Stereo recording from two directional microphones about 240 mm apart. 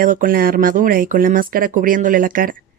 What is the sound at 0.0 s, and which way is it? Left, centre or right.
Speech, right.